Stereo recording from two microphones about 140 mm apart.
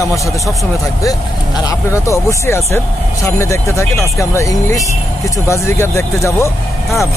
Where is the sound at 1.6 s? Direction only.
25° left (ahead or behind).